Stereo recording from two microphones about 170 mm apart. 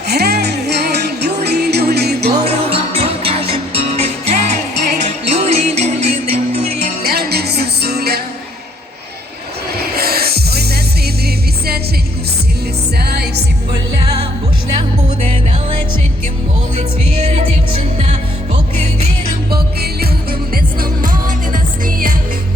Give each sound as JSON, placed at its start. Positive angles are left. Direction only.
{"t": 0.1, "sound": "music", "side_deg": -75}
{"t": 2.6, "sound": "music", "side_deg": -35}
{"t": 9.9, "sound": "music", "side_deg": -65}
{"t": 13.0, "sound": "music", "side_deg": -70}
{"t": 14.8, "sound": "music", "side_deg": -35}
{"t": 17.2, "sound": "music", "side_deg": -40}
{"t": 19.5, "sound": "music", "side_deg": -65}